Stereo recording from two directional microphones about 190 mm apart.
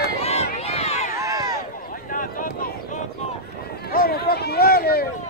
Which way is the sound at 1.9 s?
45° left (ahead or behind).